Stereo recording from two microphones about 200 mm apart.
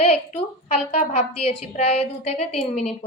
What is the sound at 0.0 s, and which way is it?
A woman's voice, 30° left (ahead or behind).